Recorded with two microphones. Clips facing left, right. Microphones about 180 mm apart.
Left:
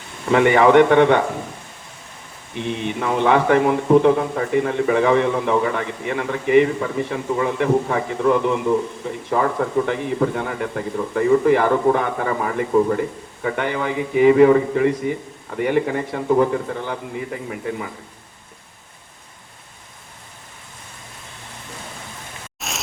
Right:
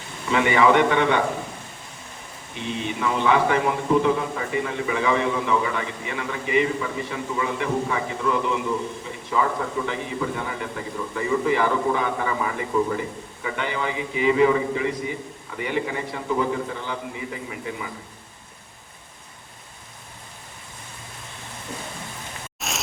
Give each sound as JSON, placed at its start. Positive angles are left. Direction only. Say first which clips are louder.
{"t": 0.3, "sound": "a man's voice", "louder": "left 5 dB", "side_deg": 55}
{"t": 2.6, "sound": "a man's voice", "louder": "left 3 dB", "side_deg": 55}
{"t": 22.6, "sound": "a sound", "louder": "even", "side_deg": 0}